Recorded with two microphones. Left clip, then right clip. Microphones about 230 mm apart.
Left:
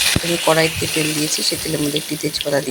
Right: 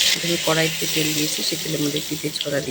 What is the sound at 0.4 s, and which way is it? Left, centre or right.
Speech, centre.